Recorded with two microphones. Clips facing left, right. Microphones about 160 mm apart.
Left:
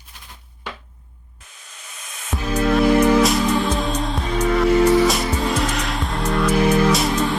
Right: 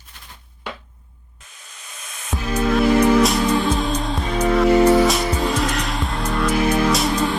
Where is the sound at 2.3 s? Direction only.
Centre (ahead or behind).